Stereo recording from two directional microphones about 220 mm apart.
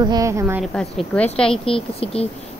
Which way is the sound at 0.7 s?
5° left (ahead or behind).